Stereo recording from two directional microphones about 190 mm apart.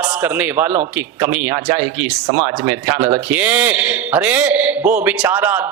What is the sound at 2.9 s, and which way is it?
Speech, 20° right (ahead or behind).